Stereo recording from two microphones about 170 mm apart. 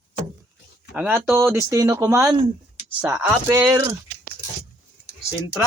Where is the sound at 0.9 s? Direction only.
10° right (ahead or behind).